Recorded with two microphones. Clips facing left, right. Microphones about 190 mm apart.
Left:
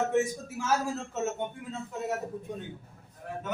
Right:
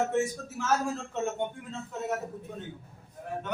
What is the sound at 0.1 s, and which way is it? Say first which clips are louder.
A man's voice: left 1 dB; 10° left (ahead or behind).